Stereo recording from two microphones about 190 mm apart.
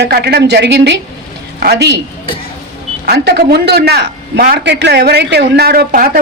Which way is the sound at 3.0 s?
60° right (ahead or behind).